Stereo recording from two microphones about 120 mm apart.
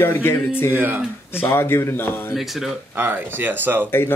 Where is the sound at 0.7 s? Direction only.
15° right (ahead or behind).